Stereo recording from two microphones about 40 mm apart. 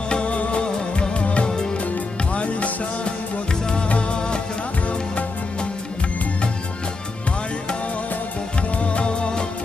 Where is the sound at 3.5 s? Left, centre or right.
Centre.